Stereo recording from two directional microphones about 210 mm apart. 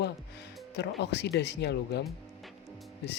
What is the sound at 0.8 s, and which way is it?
Speech, 50° left (ahead or behind).